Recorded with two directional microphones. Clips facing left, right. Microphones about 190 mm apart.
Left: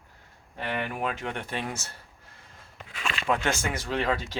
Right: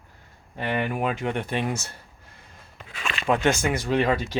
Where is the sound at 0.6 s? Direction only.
15° right (ahead or behind).